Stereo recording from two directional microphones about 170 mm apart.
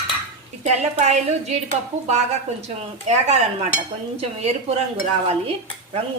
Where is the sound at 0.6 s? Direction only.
40° right (ahead or behind).